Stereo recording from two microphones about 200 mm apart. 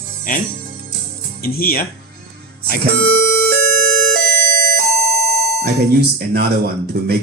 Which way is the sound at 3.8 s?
50° right (ahead or behind).